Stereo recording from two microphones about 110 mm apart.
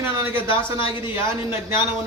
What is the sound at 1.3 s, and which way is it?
Speech, 20° right (ahead or behind).